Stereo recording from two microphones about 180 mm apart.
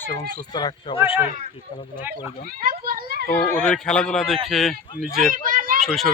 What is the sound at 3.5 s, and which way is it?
Speech, 5° left (ahead or behind).